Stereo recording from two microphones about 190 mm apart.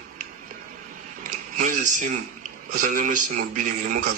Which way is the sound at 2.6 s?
45° right (ahead or behind).